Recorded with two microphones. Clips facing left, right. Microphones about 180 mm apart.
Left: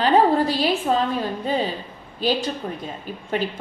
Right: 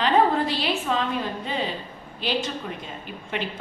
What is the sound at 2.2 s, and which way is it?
Speech, 40° left (ahead or behind).